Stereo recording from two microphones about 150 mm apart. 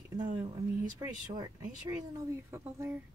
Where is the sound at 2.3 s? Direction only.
15° right (ahead or behind).